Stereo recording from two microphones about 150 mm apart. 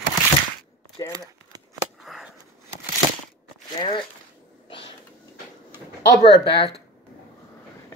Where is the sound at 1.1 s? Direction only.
25° right (ahead or behind).